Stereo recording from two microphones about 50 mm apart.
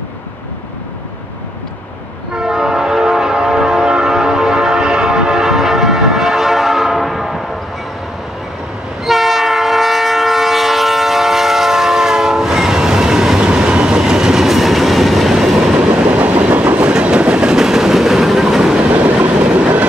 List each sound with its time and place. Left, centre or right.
2.3 s train: centre
9.0 s train: centre
15.8 s train: right
18.9 s train: right